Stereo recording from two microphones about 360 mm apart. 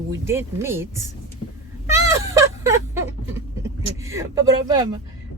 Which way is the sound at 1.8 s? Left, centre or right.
Centre.